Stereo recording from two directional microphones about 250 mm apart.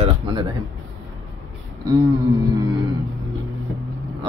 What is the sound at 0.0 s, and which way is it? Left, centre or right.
Music, centre.